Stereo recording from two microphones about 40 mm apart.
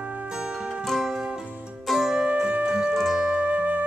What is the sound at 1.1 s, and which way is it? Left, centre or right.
Music, centre.